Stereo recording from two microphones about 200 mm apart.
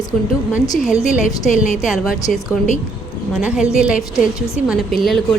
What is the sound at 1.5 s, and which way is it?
Speech, 40° left (ahead or behind).